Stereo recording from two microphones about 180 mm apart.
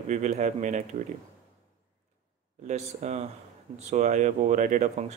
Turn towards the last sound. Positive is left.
turn(degrees=-40)  # may be behind; listen again after turning